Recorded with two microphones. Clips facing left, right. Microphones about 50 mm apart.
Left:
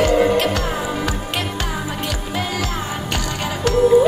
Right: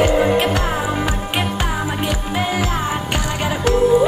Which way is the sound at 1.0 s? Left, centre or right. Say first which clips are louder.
Right 2 dB; centre.